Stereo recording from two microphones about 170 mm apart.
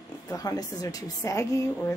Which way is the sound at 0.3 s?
20° left (ahead or behind).